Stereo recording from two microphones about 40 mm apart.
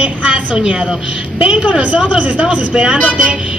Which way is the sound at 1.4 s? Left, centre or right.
Right.